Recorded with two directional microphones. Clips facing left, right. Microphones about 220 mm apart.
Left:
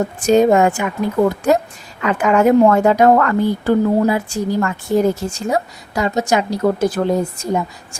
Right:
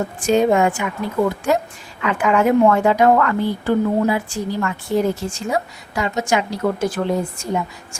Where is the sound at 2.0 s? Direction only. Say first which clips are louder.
Left 3 dB; 40° left (ahead or behind).